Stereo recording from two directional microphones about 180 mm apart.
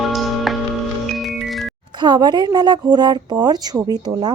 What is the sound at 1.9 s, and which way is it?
Speech, 25° right (ahead or behind).